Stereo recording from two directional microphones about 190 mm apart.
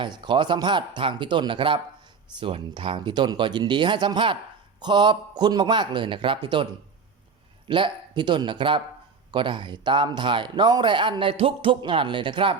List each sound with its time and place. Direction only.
0.0 s speech: 25° right (ahead or behind)
7.7 s speech: 25° right (ahead or behind)